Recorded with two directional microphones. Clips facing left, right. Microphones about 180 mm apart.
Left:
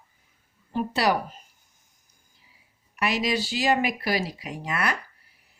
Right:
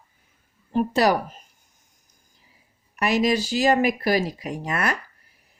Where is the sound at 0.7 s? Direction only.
45° right (ahead or behind).